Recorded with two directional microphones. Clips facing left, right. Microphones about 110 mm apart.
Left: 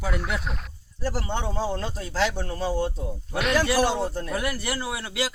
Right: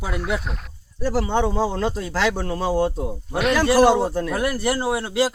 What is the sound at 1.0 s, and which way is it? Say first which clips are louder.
Speech: right 8 dB; 80° right.